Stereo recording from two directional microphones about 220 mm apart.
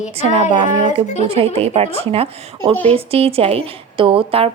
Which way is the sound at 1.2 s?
25° right (ahead or behind).